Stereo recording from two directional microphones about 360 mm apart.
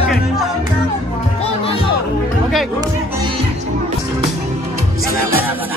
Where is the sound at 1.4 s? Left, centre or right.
Centre.